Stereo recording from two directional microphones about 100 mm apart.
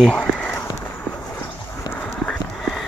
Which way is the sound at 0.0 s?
5° left (ahead or behind).